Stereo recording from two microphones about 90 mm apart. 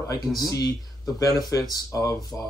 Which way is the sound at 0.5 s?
45° left (ahead or behind).